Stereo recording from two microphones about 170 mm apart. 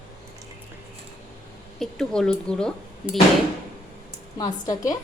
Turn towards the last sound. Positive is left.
turn(degrees=20)  # may be behind; listen again after turning